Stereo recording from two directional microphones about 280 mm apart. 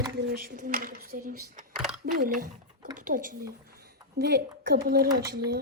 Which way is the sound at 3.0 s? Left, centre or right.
Right.